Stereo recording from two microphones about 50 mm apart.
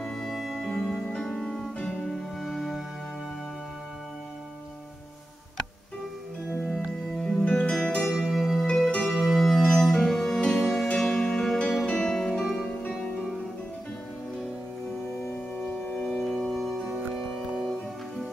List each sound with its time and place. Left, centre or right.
0.0 s music: centre
0.7 s music: centre
6.7 s music: centre
7.4 s music: left
7.8 s zither: centre
8.1 s zither: centre
8.6 s music: centre
9.0 s music: centre
12.6 s music: centre
15.7 s organ: centre
16.8 s music: centre